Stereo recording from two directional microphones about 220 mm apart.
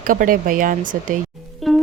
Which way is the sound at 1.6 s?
Centre (ahead or behind).